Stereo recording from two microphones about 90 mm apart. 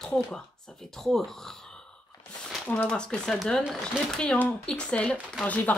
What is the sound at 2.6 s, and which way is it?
Speech, 15° left (ahead or behind).